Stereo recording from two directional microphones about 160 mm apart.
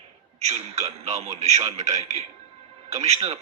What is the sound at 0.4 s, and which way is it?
A man's voice, 45° right (ahead or behind).